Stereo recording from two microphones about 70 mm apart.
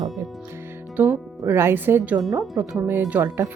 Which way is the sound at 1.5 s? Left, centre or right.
Right.